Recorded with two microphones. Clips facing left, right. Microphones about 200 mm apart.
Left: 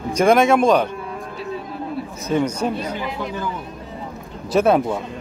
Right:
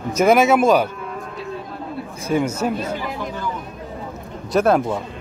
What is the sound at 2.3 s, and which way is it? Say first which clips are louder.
Speech: even; 10° right (ahead or behind).